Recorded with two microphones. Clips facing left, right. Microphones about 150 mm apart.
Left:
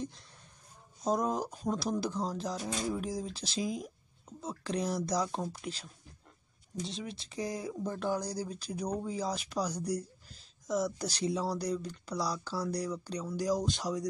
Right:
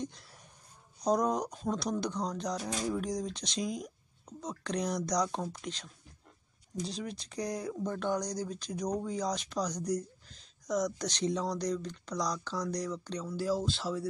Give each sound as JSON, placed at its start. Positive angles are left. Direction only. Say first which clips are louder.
{"t": 0.0, "sound": "speech", "louder": "right 1 dB", "side_deg": 0}